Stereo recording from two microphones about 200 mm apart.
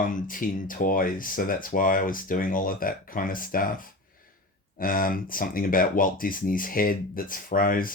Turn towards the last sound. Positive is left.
turn(degrees=45)  # may be behind; listen again after turning